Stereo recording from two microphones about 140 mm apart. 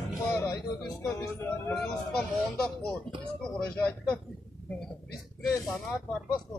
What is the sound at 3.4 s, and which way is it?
Speech, 5° left (ahead or behind).